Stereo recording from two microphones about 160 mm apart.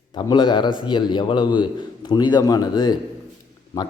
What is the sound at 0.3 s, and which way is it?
A man's voice, 30° left (ahead or behind).